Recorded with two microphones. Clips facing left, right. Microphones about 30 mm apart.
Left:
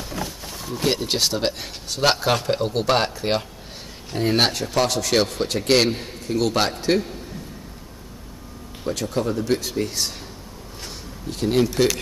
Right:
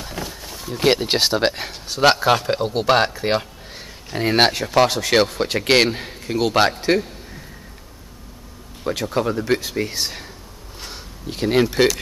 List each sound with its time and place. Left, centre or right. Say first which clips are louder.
0.0 s a sound: even; centre
0.5 s a sound: right 1 dB; centre
0.7 s a man's voice: right 5 dB; right
2.0 s a man's voice: right 4 dB; centre
4.1 s a man's voice: right 3 dB; centre
8.8 s a man's voice: right 3 dB; right
11.2 s a man's voice: right 2 dB; right